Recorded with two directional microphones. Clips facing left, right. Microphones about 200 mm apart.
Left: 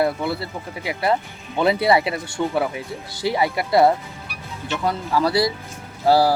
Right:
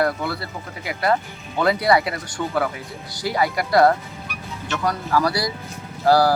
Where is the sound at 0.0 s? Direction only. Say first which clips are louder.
Left 1 dB; 25° left (ahead or behind).